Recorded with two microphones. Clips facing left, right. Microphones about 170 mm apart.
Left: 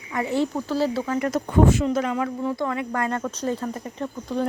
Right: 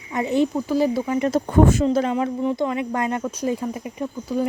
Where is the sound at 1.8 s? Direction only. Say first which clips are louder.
Right 3 dB; 30° right (ahead or behind).